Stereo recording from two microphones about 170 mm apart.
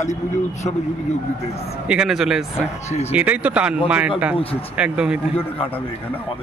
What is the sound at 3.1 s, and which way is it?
Speech, 10° right (ahead or behind).